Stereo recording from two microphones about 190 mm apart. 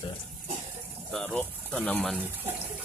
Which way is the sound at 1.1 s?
5° left (ahead or behind).